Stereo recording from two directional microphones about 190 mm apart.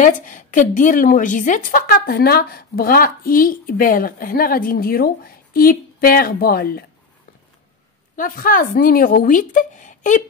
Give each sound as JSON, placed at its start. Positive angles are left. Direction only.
{"t": 0.0, "sound": "a woman's voice", "side_deg": 45}
{"t": 8.2, "sound": "a woman's voice", "side_deg": 45}